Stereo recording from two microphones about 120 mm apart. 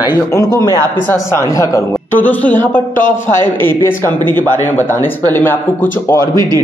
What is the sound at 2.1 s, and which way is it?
A man's voice, 15° left (ahead or behind).